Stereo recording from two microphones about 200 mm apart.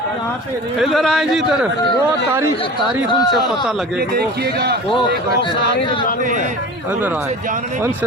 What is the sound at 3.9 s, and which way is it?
Speech, 50° right (ahead or behind).